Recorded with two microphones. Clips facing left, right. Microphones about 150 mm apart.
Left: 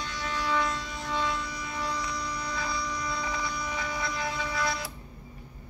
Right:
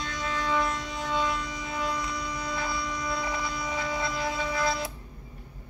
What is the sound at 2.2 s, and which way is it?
Mains hum, 20° right (ahead or behind).